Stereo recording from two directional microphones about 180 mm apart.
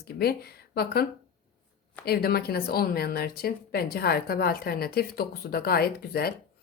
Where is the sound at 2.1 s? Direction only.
60° left (ahead or behind).